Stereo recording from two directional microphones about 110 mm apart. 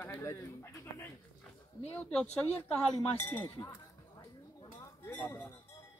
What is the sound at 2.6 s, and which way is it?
Speech, 15° left (ahead or behind).